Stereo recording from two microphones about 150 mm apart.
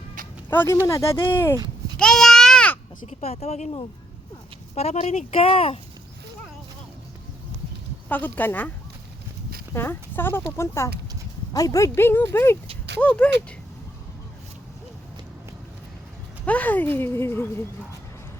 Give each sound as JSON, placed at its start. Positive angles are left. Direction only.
{"t": 0.5, "sound": "speech", "side_deg": 15}
{"t": 2.0, "sound": "a sound", "side_deg": 5}
{"t": 3.1, "sound": "speech", "side_deg": 45}
{"t": 4.7, "sound": "speech", "side_deg": 45}
{"t": 8.1, "sound": "speech", "side_deg": 10}
{"t": 9.7, "sound": "speech", "side_deg": 15}
{"t": 16.5, "sound": "speech", "side_deg": 10}